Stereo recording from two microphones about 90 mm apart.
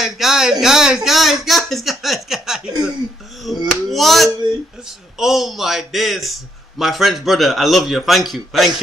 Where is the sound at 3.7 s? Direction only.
Centre (ahead or behind).